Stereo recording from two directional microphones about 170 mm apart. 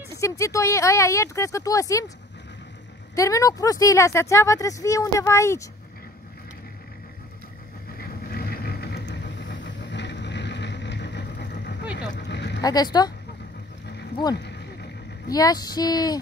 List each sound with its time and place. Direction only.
0.1 s speech: 20° left (ahead or behind)
3.2 s speech: 20° left (ahead or behind)
8.0 s vehicle: 65° left (ahead or behind); by 11.8 s 85° left
12.0 s a sound: 90° left
12.6 s speech: 25° left (ahead or behind)
14.3 s horse: 85° left
15.2 s speech: 20° left (ahead or behind)